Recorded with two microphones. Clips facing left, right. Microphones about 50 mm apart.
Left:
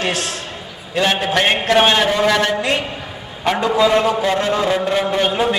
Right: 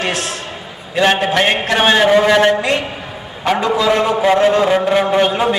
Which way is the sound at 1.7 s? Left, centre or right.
Centre.